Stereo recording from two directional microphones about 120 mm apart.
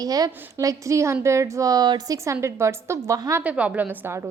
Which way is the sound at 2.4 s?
25° right (ahead or behind).